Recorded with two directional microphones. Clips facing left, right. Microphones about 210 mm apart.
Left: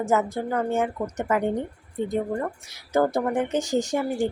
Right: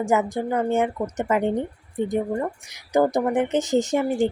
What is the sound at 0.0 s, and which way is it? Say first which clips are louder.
A woman's voice: right 2 dB; 15° right (ahead or behind).